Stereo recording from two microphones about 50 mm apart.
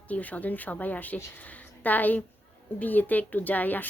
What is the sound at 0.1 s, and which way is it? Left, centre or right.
A woman's voice, left.